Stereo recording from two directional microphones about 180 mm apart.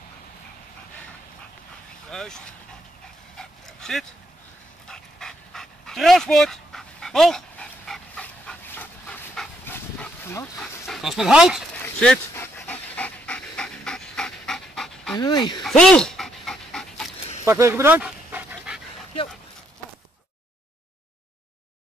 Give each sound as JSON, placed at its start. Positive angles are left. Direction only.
{"t": 2.0, "sound": "vehicle", "side_deg": 5}
{"t": 3.3, "sound": "dog", "side_deg": 0}
{"t": 11.7, "sound": "pant", "side_deg": 5}
{"t": 15.1, "sound": "speech", "side_deg": 25}
{"t": 15.6, "sound": "pant", "side_deg": 5}
{"t": 17.5, "sound": "dog", "side_deg": -15}